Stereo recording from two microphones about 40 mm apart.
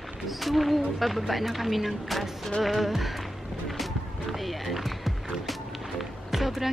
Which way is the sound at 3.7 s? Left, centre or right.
Centre.